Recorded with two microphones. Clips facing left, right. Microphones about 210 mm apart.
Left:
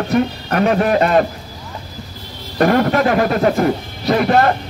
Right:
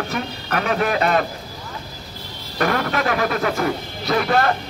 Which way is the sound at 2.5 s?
35° left (ahead or behind).